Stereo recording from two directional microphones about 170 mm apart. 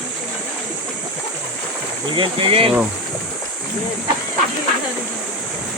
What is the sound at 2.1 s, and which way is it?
Speech, 30° right (ahead or behind).